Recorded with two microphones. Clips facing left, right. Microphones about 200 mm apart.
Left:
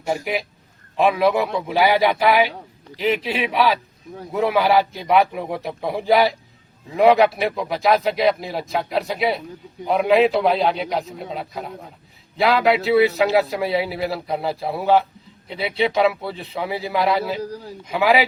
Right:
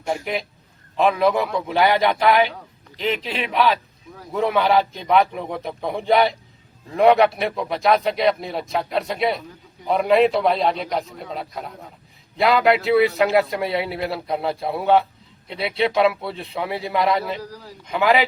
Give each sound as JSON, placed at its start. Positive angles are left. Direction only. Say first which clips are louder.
{"t": 0.0, "sound": "a man's voice", "louder": "left 1 dB", "side_deg": 5}
{"t": 17.4, "sound": "a man's voice", "louder": "left 6 dB", "side_deg": 25}
{"t": 17.8, "sound": "a man's voice", "louder": "left 1 dB", "side_deg": 5}